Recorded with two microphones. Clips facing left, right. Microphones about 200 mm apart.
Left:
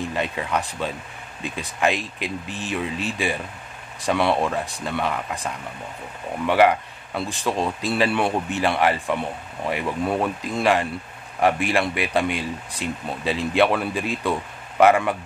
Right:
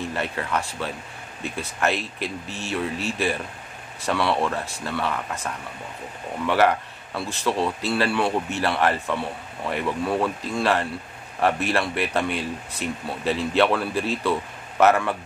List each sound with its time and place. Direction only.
0.1 s speech: 15° left (ahead or behind)